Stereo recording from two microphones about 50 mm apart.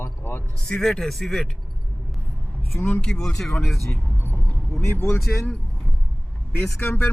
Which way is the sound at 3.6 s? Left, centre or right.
Centre.